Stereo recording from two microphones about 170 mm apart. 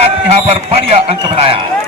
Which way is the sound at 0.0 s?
35° right (ahead or behind).